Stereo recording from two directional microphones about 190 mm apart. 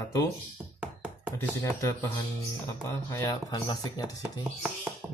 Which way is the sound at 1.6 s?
15° left (ahead or behind).